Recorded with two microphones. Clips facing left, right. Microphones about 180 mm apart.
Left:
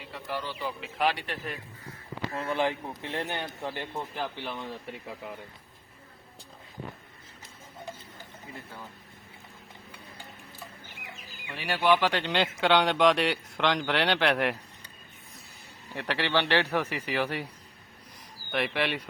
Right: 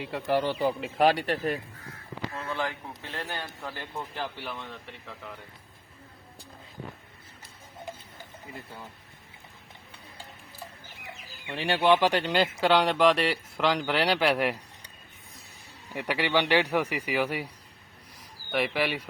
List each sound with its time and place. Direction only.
0.1 s speech: 65° right (ahead or behind)
0.6 s speech: 45° right (ahead or behind)
2.3 s a man's voice: 20° left (ahead or behind)
11.4 s speech: 30° right (ahead or behind)
12.2 s speech: 5° right (ahead or behind)
16.0 s a man's voice: 10° right (ahead or behind)
18.5 s a man's voice: 5° right (ahead or behind)